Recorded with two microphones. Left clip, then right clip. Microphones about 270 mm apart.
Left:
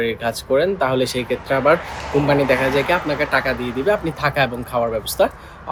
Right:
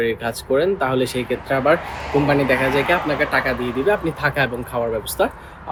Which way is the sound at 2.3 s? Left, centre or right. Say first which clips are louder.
Left 2 dB; centre.